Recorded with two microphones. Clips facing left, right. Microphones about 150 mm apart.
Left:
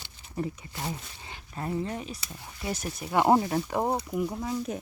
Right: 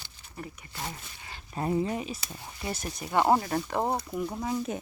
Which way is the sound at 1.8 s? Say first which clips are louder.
Right 3 dB; 5° right (ahead or behind).